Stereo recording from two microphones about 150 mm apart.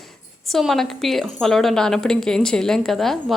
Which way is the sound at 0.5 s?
Centre (ahead or behind).